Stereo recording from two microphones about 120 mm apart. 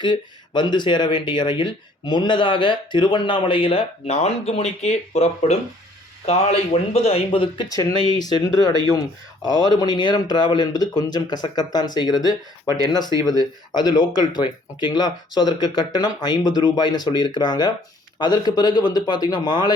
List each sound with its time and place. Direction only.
0.0 s speech: 40° left (ahead or behind)
7.7 s speech: 35° left (ahead or behind)
13.7 s speech: 40° left (ahead or behind)